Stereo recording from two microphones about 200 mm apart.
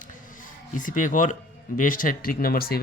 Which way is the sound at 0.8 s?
40° left (ahead or behind).